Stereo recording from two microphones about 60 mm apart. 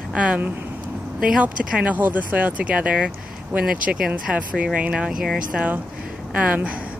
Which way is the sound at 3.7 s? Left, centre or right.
Centre.